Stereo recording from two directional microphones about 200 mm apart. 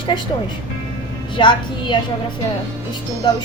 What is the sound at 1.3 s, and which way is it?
Speech, 25° left (ahead or behind).